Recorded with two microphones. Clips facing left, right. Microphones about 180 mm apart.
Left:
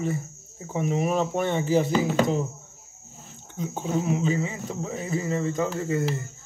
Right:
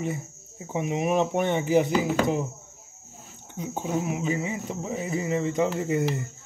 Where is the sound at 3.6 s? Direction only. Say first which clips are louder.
Left 1 dB; 10° right (ahead or behind).